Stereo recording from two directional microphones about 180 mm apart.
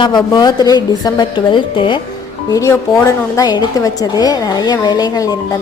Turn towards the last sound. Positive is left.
turn(degrees=20)  # may be behind; listen again after turning